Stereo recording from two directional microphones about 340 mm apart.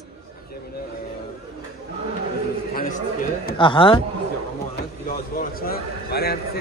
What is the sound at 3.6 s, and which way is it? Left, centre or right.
Speech, centre.